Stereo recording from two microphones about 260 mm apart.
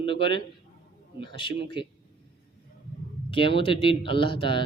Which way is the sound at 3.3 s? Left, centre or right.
Centre.